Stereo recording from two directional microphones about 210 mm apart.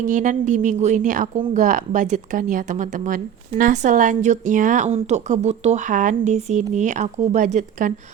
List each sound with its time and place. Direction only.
0.0 s a woman's voice: 35° right (ahead or behind)